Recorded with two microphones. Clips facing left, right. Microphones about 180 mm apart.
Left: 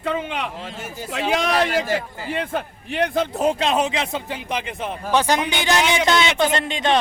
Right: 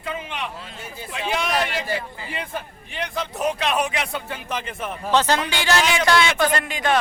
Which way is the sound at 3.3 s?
25° left (ahead or behind).